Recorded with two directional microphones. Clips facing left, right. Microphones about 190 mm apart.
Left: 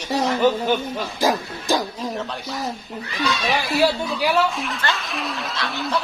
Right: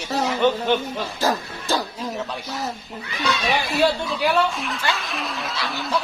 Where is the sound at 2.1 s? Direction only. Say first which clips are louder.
Left 1 dB; 5° right (ahead or behind).